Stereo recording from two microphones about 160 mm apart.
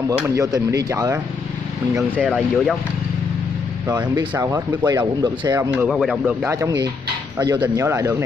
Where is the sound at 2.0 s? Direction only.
10° right (ahead or behind).